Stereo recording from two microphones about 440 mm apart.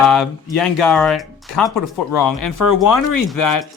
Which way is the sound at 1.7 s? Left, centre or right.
Left.